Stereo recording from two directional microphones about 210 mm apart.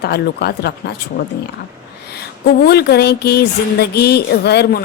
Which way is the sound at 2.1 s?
50° left (ahead or behind).